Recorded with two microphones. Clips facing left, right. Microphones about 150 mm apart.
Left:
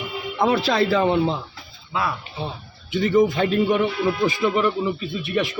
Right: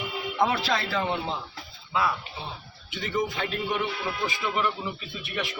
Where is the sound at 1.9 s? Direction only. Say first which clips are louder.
Left 1 dB; 50° left (ahead or behind).